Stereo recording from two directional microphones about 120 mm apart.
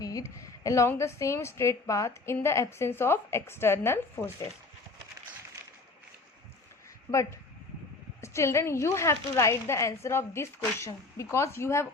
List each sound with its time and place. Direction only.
0.0 s a woman's voice: 30° left (ahead or behind)
7.1 s a woman's voice: 25° left (ahead or behind)